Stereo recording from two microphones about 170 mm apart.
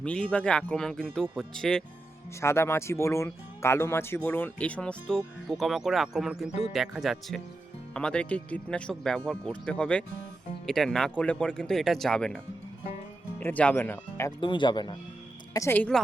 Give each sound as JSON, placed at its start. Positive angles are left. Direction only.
{"t": 0.0, "sound": "speech", "side_deg": 5}
{"t": 2.4, "sound": "speech", "side_deg": 15}
{"t": 6.5, "sound": "speech", "side_deg": 40}
{"t": 6.7, "sound": "speech", "side_deg": 0}
{"t": 13.4, "sound": "speech", "side_deg": 10}
{"t": 14.3, "sound": "speech", "side_deg": 30}
{"t": 15.5, "sound": "speech", "side_deg": 15}